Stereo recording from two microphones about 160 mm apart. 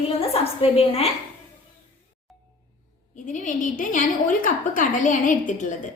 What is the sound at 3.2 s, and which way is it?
A woman's voice, 55° left (ahead or behind).